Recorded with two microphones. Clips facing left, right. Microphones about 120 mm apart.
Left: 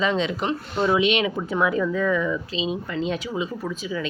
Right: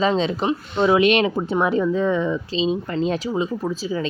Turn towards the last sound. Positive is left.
turn(degrees=-35)  # may be behind; listen again after turning